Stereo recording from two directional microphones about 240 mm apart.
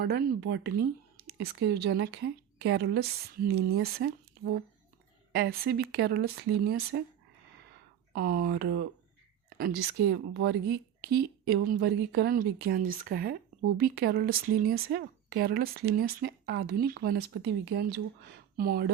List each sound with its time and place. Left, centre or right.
0.0 s speech: right
8.1 s speech: right
10.1 s speech: right